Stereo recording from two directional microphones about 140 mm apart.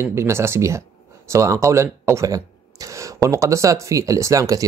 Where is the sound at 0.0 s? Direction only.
20° right (ahead or behind).